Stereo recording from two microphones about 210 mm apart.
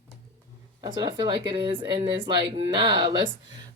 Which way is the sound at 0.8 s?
20° right (ahead or behind).